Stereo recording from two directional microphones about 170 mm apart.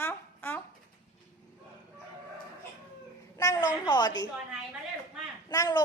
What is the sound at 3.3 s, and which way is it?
Speech, 20° left (ahead or behind).